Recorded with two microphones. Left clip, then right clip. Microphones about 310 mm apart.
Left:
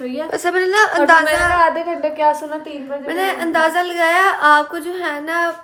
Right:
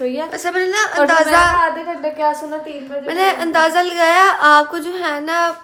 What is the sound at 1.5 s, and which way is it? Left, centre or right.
Speech, left.